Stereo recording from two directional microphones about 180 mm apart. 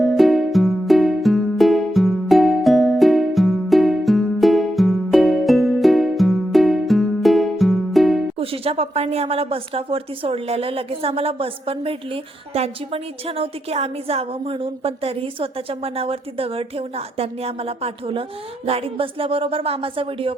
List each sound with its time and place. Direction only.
0.0 s music: centre (ahead or behind)
8.4 s a woman's voice: 30° right (ahead or behind)